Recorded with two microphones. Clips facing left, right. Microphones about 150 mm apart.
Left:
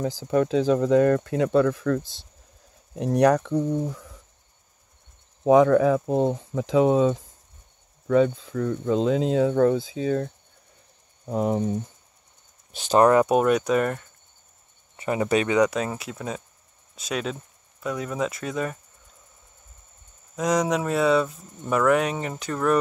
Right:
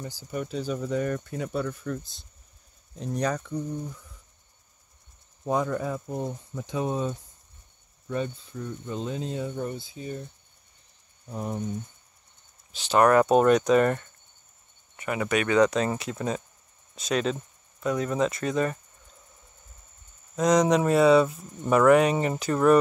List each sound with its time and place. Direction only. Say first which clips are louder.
0.0 s speech: left 11 dB; 90° left
2.9 s speech: left 9 dB; 75° left (ahead or behind)
5.4 s speech: left 11 dB; 90° left
12.7 s speech: left 3 dB; 45° left (ahead or behind)
13.0 s speech: even; 15° left (ahead or behind)
15.0 s speech: left 4 dB; 30° left (ahead or behind)
15.5 s speech: even; 10° left (ahead or behind)
20.3 s speech: right 2 dB; 5° left (ahead or behind)